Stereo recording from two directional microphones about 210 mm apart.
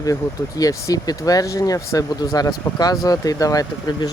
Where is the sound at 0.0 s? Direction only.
15° left (ahead or behind).